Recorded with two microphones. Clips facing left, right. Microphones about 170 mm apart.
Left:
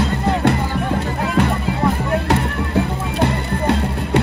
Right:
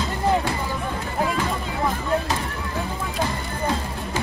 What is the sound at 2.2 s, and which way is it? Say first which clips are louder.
Music: left 8 dB; 65° left (ahead or behind).